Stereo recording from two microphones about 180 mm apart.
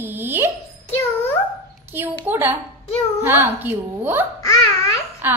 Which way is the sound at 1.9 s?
10° right (ahead or behind).